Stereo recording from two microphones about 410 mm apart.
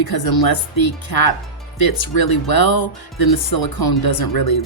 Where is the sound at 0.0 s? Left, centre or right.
Left.